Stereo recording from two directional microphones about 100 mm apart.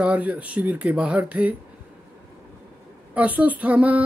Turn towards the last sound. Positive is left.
turn(degrees=-15)  # may be behind; listen again after turning